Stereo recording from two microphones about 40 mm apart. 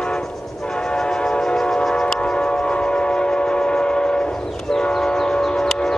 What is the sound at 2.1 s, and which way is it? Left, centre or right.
Train, left.